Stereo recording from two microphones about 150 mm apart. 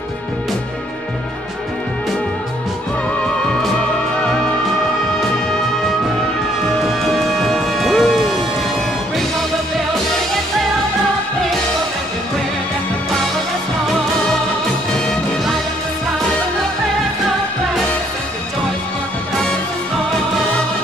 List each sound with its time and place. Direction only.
6.8 s music: centre (ahead or behind)